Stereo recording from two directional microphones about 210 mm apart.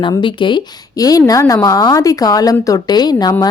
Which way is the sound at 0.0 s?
25° left (ahead or behind).